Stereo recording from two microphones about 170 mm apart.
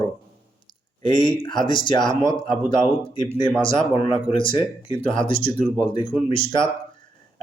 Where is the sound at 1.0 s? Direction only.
30° left (ahead or behind).